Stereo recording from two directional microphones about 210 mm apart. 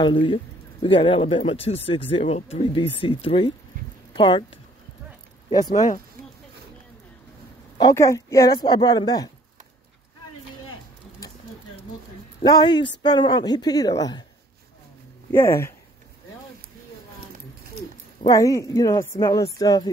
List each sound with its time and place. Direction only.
0.0 s speech: 25° left (ahead or behind)
5.5 s a woman's voice: 20° left (ahead or behind)
7.7 s a woman's voice: 15° left (ahead or behind)
12.4 s speech: 20° left (ahead or behind)
15.3 s a woman's voice: 10° left (ahead or behind)
18.2 s a woman's voice: 15° left (ahead or behind)